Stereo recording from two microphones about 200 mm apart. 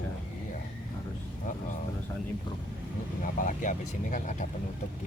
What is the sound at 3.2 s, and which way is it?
Speech, 40° left (ahead or behind).